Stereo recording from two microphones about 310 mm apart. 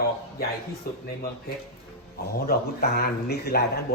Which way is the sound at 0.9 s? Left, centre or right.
Left.